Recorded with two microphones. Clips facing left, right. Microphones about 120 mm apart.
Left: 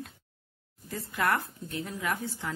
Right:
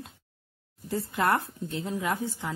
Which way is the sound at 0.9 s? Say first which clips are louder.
Right 3 dB; 25° right (ahead or behind).